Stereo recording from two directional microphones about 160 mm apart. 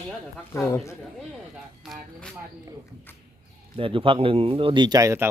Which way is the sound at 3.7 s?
35° right (ahead or behind).